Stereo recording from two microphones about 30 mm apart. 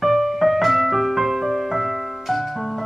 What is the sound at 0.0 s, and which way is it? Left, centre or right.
Music, centre.